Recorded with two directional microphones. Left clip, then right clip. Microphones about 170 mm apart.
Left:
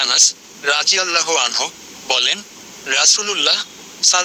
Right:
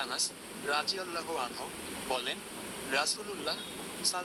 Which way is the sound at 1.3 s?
65° left (ahead or behind).